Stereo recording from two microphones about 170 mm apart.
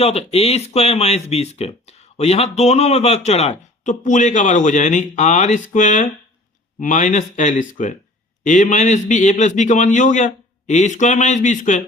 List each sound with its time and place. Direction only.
0.0 s a man's voice: 35° left (ahead or behind)